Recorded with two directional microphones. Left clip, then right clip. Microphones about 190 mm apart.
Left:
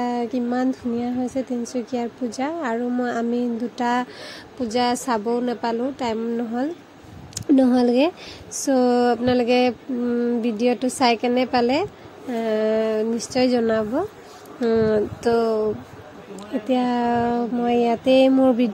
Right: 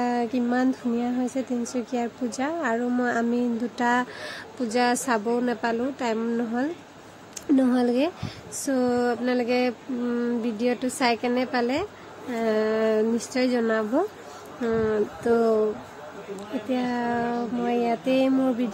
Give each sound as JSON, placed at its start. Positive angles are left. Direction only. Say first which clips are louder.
{"t": 0.0, "sound": "speech", "louder": "left 1 dB", "side_deg": 0}
{"t": 7.3, "sound": "a woman's voice", "louder": "left 5 dB", "side_deg": 20}
{"t": 10.0, "sound": "a sound", "louder": "left 5 dB", "side_deg": 10}
{"t": 10.4, "sound": "a woman's voice", "louder": "left 5 dB", "side_deg": 20}
{"t": 16.6, "sound": "a woman's voice", "louder": "left 6 dB", "side_deg": 25}